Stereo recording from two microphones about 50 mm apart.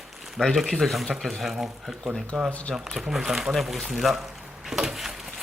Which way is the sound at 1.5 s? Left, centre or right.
Centre.